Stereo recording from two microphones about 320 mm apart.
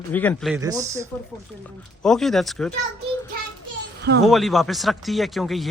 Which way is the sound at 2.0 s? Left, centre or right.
Centre.